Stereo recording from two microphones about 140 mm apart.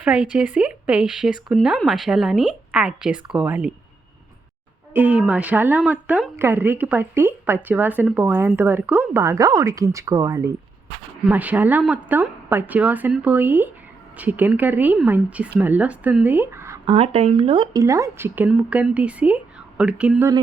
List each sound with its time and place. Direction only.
0.0 s a woman's voice: 10° right (ahead or behind)
4.9 s a woman's voice: 10° right (ahead or behind)
11.3 s a woman's voice: 10° right (ahead or behind)
16.8 s speech: 45° right (ahead or behind)
17.7 s a woman's voice: 20° right (ahead or behind)